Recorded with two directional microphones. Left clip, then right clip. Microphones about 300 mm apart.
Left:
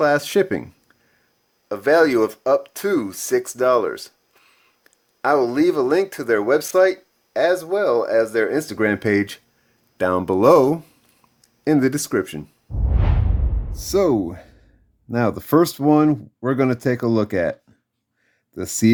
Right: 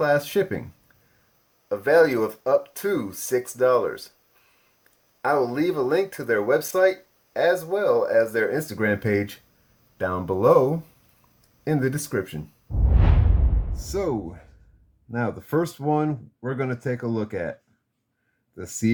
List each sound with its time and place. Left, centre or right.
0.0 s speech: left
1.7 s speech: left
12.7 s music: centre
13.7 s speech: left